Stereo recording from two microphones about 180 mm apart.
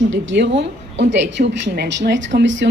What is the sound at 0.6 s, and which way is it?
A woman's voice, 80° right.